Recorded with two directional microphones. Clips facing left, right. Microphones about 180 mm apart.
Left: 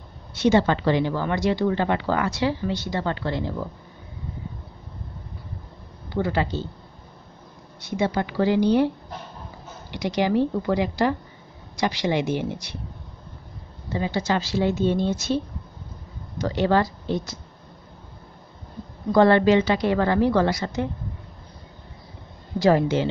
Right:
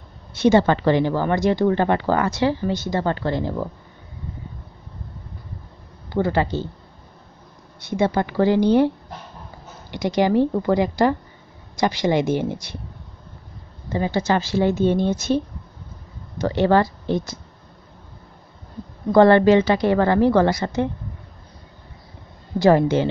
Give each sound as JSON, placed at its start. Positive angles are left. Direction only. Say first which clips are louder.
{"t": 0.4, "sound": "speech", "louder": "right 3 dB", "side_deg": -45}
{"t": 6.1, "sound": "speech", "louder": "right 4 dB", "side_deg": -50}
{"t": 7.8, "sound": "speech", "louder": "right 4 dB", "side_deg": -50}
{"t": 9.9, "sound": "speech", "louder": "right 4 dB", "side_deg": -45}
{"t": 13.9, "sound": "speech", "louder": "right 3 dB", "side_deg": -45}
{"t": 19.1, "sound": "speech", "louder": "right 4 dB", "side_deg": -50}
{"t": 22.6, "sound": "speech", "louder": "right 3 dB", "side_deg": -55}